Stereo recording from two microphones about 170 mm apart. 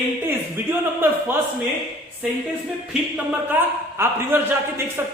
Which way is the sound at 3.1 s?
10° right (ahead or behind).